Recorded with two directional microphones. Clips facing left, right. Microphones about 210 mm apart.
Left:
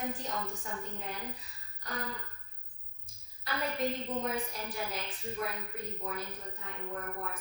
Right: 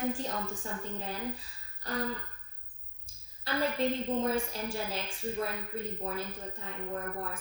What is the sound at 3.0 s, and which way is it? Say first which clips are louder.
A woman's voice: right 3 dB; 30° right (ahead or behind).